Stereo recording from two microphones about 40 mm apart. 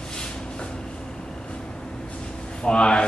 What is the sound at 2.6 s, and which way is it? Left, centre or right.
Speech, left.